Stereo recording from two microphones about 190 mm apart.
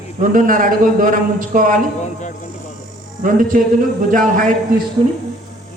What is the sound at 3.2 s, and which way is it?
A man's voice, 45° right (ahead or behind).